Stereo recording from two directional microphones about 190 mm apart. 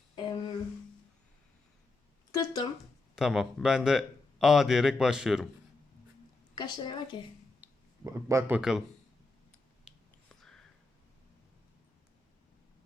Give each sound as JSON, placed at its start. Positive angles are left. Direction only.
{"t": 0.2, "sound": "a sound", "side_deg": 25}
{"t": 2.3, "sound": "a woman's voice", "side_deg": 20}
{"t": 3.2, "sound": "speech", "side_deg": -5}
{"t": 6.6, "sound": "a woman's voice", "side_deg": 25}
{"t": 7.6, "sound": "speech", "side_deg": -15}
{"t": 9.8, "sound": "whispering", "side_deg": 0}